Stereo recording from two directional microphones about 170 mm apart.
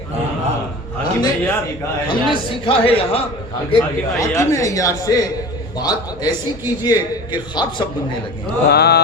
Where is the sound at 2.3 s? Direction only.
35° left (ahead or behind).